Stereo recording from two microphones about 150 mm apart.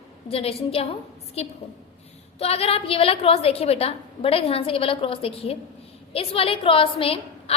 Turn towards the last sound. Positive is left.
turn(degrees=40)  # may be behind; listen again after turning